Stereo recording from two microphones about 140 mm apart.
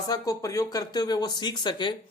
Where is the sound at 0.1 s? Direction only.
25° left (ahead or behind).